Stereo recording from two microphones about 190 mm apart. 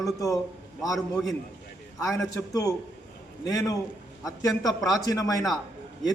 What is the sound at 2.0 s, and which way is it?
A man's voice, 15° left (ahead or behind).